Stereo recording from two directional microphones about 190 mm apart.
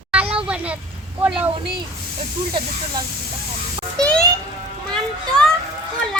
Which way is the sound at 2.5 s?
25° right (ahead or behind).